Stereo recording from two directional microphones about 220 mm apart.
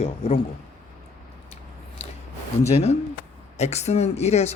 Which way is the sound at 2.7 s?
30° left (ahead or behind).